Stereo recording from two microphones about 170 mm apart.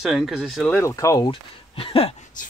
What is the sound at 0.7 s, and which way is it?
Speech, 15° left (ahead or behind).